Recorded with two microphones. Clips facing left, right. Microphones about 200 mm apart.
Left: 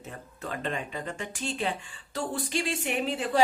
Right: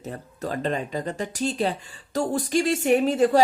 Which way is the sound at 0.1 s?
35° right (ahead or behind).